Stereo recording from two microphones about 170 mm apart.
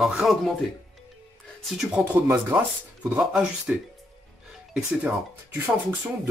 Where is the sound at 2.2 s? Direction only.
10° right (ahead or behind).